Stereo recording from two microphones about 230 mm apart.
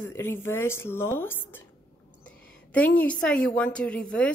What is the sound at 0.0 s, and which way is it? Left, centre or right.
A woman's voice, centre.